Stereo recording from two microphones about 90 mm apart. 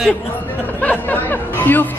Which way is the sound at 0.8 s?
20° left (ahead or behind).